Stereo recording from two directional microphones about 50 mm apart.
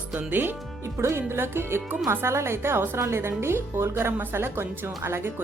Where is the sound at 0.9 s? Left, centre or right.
Right.